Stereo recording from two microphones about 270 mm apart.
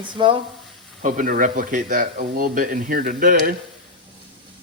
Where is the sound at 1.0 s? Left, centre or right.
Right.